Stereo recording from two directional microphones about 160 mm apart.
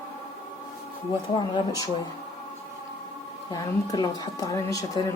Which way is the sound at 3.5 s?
20° left (ahead or behind).